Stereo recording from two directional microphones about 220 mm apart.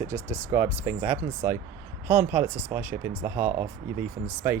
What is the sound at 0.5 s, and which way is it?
Speech, 10° right (ahead or behind).